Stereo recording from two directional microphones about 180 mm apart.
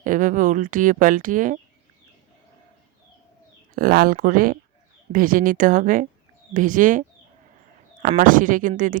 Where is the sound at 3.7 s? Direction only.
55° right (ahead or behind).